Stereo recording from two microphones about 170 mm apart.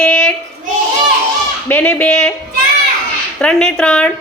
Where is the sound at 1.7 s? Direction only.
10° left (ahead or behind).